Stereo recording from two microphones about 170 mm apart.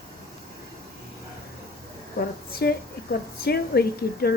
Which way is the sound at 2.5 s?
70° left (ahead or behind).